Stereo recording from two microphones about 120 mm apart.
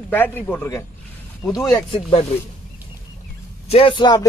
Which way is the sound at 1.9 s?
50° left (ahead or behind).